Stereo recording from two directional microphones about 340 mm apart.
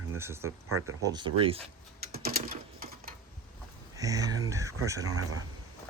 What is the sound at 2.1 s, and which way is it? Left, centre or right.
Sewing machine, right.